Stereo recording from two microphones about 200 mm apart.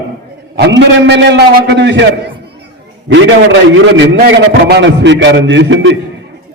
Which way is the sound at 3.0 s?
70° right (ahead or behind).